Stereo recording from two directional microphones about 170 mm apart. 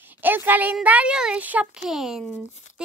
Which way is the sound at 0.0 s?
10° right (ahead or behind).